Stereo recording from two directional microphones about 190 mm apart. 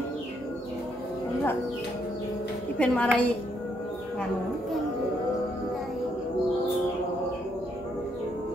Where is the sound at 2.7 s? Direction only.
5° left (ahead or behind).